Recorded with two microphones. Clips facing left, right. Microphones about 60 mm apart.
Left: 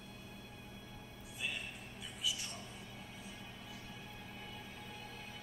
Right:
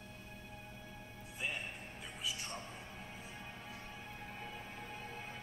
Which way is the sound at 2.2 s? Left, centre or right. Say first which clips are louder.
Left 1 dB; right.